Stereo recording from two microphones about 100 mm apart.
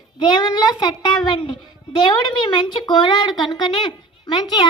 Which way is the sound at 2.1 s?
45° left (ahead or behind).